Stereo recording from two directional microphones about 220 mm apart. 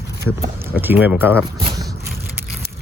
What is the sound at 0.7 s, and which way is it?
Speech, 10° right (ahead or behind).